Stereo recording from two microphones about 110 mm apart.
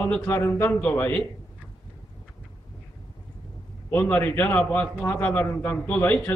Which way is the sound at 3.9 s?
15° left (ahead or behind).